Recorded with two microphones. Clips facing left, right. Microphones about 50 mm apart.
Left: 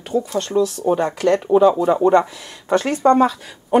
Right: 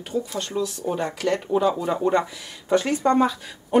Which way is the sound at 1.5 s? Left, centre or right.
Left.